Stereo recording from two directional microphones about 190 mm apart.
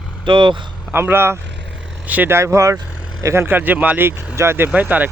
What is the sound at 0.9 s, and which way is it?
Speech, 10° right (ahead or behind).